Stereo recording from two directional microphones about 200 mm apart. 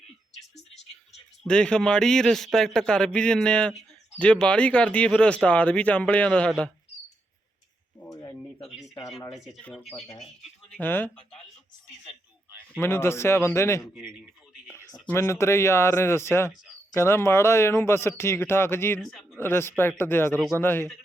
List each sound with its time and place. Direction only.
1.5 s a man's voice: 5° left (ahead or behind)
7.9 s a sound: 10° left (ahead or behind)
9.3 s a man's voice: centre (ahead or behind)
9.8 s speech: 30° left (ahead or behind)
10.7 s speech: 10° left (ahead or behind)
12.5 s a sound: 10° right (ahead or behind)
12.8 s speech: 10° left (ahead or behind)
18.9 s speech: centre (ahead or behind)